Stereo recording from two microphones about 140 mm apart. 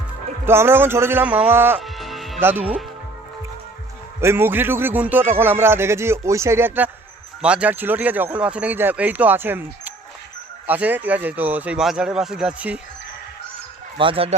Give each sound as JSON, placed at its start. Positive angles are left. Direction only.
{"t": 0.4, "sound": "a man's voice", "side_deg": -15}
{"t": 1.8, "sound": "music", "side_deg": 0}
{"t": 4.2, "sound": "a man's voice", "side_deg": -15}
{"t": 14.0, "sound": "speech", "side_deg": -40}